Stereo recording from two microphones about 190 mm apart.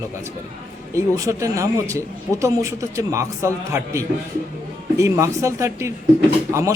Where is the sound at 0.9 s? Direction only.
15° right (ahead or behind).